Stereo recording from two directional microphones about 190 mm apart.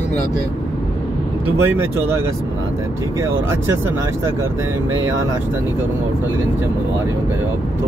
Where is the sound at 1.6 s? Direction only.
10° right (ahead or behind).